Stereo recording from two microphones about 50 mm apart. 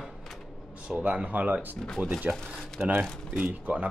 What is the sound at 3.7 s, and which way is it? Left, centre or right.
Speech, right.